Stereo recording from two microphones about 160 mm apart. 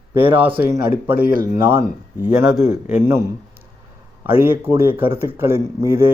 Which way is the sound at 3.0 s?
15° right (ahead or behind).